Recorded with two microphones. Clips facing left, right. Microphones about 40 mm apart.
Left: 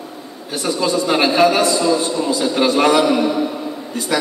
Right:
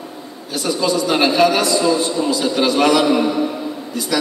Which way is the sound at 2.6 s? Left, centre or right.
Left.